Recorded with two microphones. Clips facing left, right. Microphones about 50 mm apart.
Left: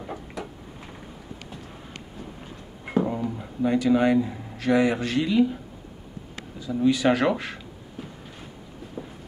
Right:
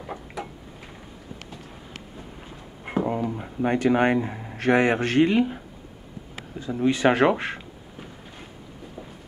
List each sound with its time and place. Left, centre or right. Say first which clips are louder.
0.0 s tick-tock: even; centre
3.1 s a sound: right 2 dB; right
3.6 s a man's voice: even; right
6.7 s speech: even; right